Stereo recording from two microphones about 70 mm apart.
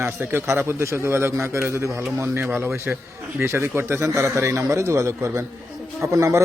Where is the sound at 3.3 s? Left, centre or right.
Right.